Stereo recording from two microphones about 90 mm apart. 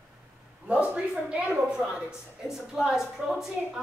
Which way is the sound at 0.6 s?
15° right (ahead or behind).